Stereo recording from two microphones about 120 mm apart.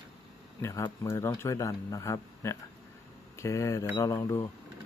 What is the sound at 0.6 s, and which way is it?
Speech, 25° left (ahead or behind).